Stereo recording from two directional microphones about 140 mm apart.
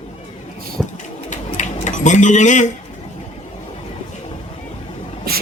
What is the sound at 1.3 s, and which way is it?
Pigeon, 60° left (ahead or behind).